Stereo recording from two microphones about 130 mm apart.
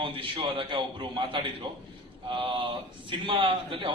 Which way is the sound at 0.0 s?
40° right (ahead or behind).